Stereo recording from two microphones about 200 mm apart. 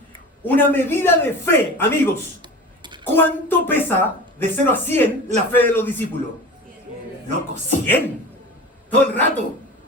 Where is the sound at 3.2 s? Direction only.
10° left (ahead or behind).